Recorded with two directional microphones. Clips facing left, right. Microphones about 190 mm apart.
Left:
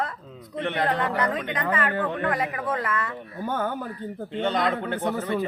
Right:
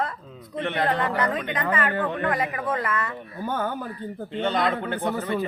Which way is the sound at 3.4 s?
55° left (ahead or behind).